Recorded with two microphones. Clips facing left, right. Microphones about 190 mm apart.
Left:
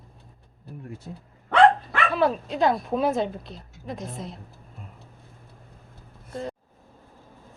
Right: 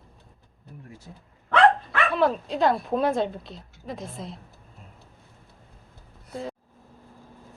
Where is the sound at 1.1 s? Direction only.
65° left (ahead or behind).